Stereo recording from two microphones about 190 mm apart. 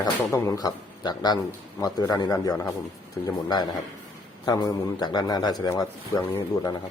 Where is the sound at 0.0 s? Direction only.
15° left (ahead or behind).